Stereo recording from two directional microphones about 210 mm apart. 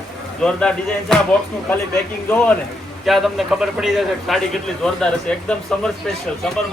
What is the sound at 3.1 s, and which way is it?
A man's voice, centre (ahead or behind).